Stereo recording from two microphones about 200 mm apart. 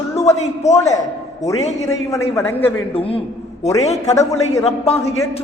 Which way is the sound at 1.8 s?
15° left (ahead or behind).